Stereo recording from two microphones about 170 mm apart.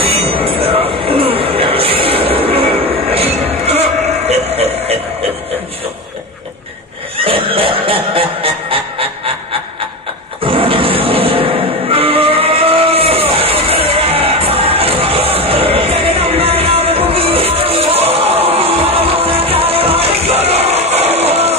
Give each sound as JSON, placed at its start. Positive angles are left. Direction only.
{"t": 0.0, "sound": "music", "side_deg": -35}
{"t": 7.2, "sound": "a sound", "side_deg": -35}
{"t": 10.4, "sound": "music", "side_deg": -30}